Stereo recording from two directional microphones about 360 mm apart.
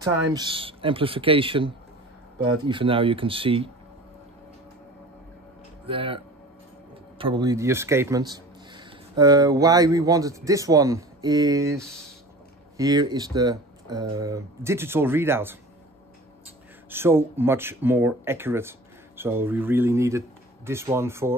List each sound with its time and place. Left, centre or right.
0.3 s speech: centre
5.9 s speech: centre
16.9 s speech: centre